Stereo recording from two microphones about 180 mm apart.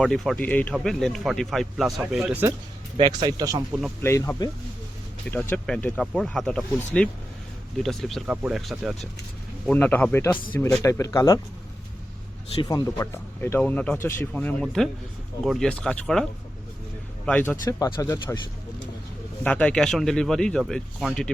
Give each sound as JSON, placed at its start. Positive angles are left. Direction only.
{"t": 0.0, "sound": "speech", "side_deg": 5}
{"t": 3.0, "sound": "speech", "side_deg": -25}
{"t": 3.7, "sound": "speech", "side_deg": -5}
{"t": 4.0, "sound": "speech", "side_deg": 15}
{"t": 9.6, "sound": "speech", "side_deg": 10}
{"t": 12.6, "sound": "speech", "side_deg": 20}
{"t": 17.2, "sound": "speech", "side_deg": 10}
{"t": 17.7, "sound": "speech", "side_deg": 20}
{"t": 19.5, "sound": "speech", "side_deg": 5}